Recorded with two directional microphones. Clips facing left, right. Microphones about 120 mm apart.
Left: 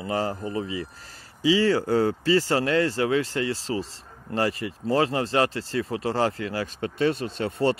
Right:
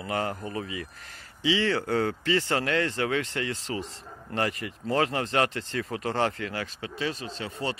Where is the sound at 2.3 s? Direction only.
35° left (ahead or behind).